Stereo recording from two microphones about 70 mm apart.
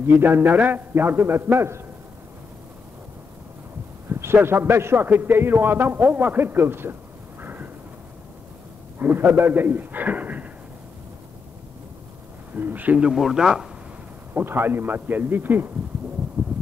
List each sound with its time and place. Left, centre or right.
0.0 s a man's voice: right
4.1 s a man's voice: right
7.4 s a sound: right
9.0 s a man's voice: right
12.5 s a man's voice: right; by 13.7 s centre
14.3 s a man's voice: right
16.4 s a sound: centre